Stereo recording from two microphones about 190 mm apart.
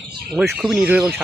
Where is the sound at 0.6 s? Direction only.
5° right (ahead or behind).